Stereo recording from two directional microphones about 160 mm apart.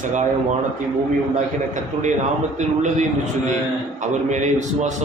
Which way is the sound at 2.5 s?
45° right (ahead or behind).